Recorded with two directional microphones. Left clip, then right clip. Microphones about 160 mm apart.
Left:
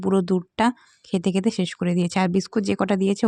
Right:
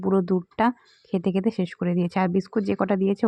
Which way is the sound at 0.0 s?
35° left (ahead or behind).